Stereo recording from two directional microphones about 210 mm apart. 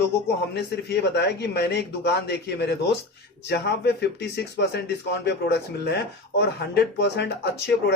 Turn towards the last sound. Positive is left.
turn(degrees=55)  # may be behind; listen again after turning